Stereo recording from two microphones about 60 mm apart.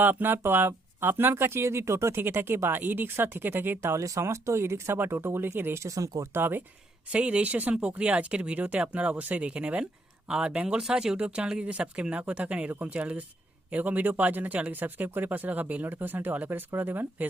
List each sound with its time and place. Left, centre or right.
0.0 s speech: right
3.9 s speech: right
4.2 s speech: right
5.8 s speech: right
6.3 s speech: right
7.1 s speech: right